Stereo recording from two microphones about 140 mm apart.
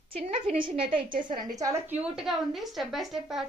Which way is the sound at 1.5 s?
25° right (ahead or behind).